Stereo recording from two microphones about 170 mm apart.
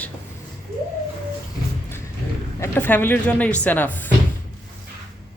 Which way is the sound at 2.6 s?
10° left (ahead or behind).